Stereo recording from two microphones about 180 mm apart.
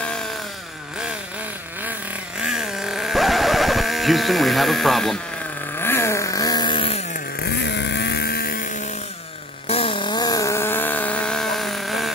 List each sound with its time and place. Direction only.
1.8 s vehicle: 5° right (ahead or behind)
5.8 s vehicle: 15° left (ahead or behind); by 7.0 s 30° left (ahead or behind)
7.4 s vehicle: 70° left (ahead or behind)
9.7 s a sound: 30° left (ahead or behind); by 12.1 s centre (ahead or behind)